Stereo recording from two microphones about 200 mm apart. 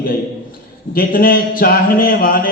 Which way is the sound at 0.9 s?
45° left (ahead or behind).